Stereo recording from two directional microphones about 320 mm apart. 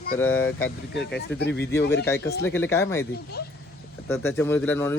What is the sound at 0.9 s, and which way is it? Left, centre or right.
Speech, left.